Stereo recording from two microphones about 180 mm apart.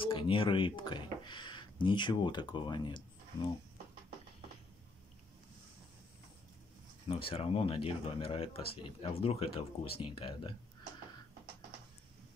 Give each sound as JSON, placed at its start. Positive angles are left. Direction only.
{"t": 0.0, "sound": "speech", "side_deg": 30}
{"t": 7.1, "sound": "speech", "side_deg": 30}